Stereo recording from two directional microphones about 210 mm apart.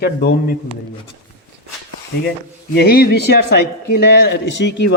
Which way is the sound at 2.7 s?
50° left (ahead or behind).